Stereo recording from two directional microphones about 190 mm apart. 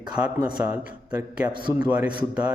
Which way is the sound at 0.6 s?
5° right (ahead or behind).